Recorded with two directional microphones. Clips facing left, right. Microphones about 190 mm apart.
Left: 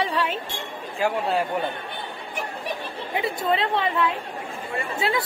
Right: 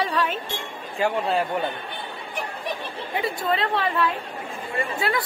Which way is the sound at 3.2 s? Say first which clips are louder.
Left 1 dB; 20° left (ahead or behind).